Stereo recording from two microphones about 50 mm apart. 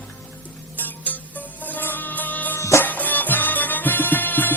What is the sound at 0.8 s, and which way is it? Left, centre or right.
Music, left.